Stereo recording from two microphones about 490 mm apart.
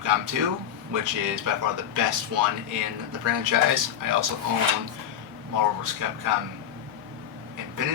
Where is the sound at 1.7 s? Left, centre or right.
Right.